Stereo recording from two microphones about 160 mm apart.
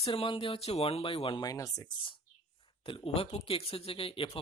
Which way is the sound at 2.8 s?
35° left (ahead or behind).